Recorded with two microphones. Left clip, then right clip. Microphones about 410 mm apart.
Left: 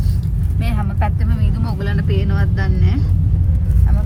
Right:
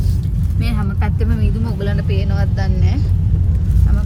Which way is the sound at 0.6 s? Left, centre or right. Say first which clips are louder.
Left 2 dB; centre.